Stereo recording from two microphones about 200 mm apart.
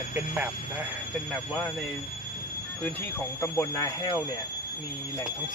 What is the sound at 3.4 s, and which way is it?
Speech, 15° left (ahead or behind).